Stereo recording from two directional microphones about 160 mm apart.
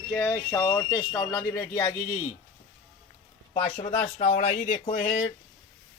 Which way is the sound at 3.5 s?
10° left (ahead or behind).